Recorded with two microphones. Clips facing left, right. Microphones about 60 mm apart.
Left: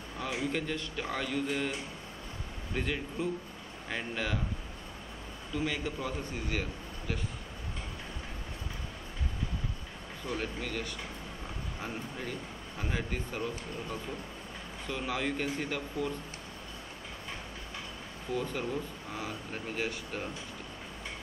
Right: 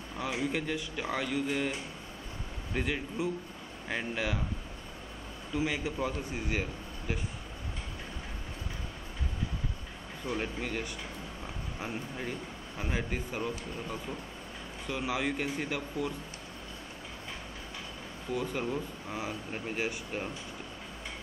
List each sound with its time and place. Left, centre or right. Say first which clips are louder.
0.2 s speech: right 1 dB; centre
2.7 s speech: right 1 dB; centre
5.5 s speech: right 2 dB; centre
10.3 s speech: right 1 dB; centre
18.3 s speech: right 1 dB; centre